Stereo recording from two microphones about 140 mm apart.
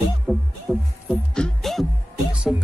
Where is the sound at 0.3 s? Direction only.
5° left (ahead or behind).